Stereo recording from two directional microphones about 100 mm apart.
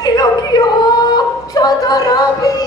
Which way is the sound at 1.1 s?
40° left (ahead or behind).